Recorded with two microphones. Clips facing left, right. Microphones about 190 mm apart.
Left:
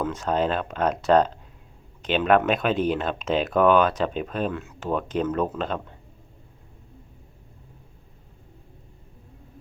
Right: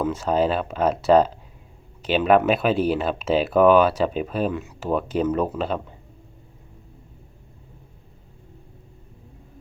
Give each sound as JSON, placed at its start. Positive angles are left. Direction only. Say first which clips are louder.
{"t": 0.0, "sound": "speech", "louder": "right 3 dB", "side_deg": -10}